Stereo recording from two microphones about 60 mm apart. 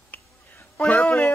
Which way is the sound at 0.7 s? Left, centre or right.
Left.